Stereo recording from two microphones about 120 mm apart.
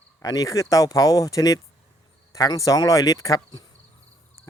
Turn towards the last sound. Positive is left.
turn(degrees=30)  # may be behind; listen again after turning